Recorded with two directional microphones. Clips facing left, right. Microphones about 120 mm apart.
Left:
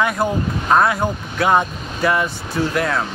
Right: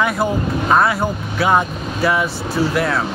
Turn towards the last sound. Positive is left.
turn(degrees=0)  # may be behind; listen again after turning